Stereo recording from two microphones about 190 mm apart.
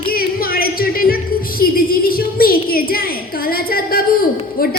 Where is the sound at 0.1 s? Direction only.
50° left (ahead or behind).